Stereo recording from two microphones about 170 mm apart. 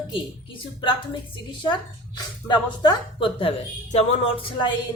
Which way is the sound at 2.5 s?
25° left (ahead or behind).